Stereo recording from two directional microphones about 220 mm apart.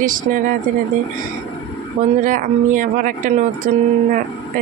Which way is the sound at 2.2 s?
35° right (ahead or behind).